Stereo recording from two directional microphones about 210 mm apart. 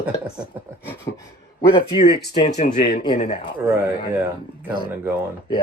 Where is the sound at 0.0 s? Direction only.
5° right (ahead or behind).